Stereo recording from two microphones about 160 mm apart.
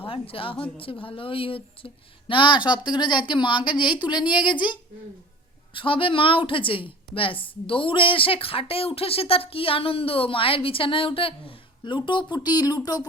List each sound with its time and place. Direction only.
0.0 s a woman's voice: 35° left (ahead or behind)